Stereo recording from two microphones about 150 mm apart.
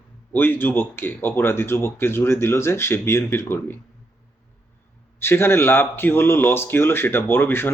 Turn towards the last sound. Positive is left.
turn(degrees=15)  # may be behind; listen again after turning